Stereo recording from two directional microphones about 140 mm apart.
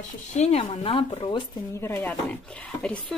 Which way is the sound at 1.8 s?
20° left (ahead or behind).